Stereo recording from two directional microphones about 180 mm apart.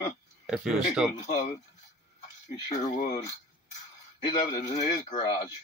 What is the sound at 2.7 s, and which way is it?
Speech, 40° left (ahead or behind).